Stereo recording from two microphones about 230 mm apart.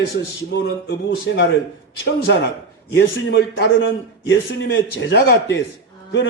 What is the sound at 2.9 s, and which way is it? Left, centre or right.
A man's voice, left.